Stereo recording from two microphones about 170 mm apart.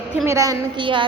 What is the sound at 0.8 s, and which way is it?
Speech, 30° right (ahead or behind).